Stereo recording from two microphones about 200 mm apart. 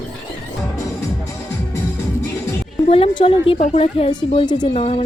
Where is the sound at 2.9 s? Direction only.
30° left (ahead or behind).